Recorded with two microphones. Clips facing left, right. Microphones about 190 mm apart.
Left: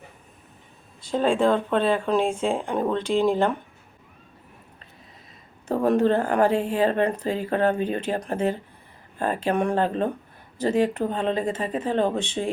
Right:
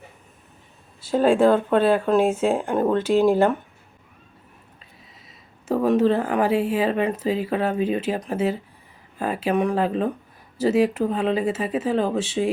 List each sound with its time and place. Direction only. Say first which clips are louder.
1.0 s speech: right 4 dB; 5° right (ahead or behind)
5.6 s speech: right 2 dB; 5° right (ahead or behind)